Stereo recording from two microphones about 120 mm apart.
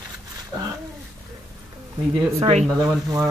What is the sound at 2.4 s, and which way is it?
Speech, 60° right (ahead or behind).